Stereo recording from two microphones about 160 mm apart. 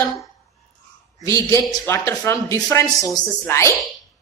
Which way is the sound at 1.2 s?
20° left (ahead or behind).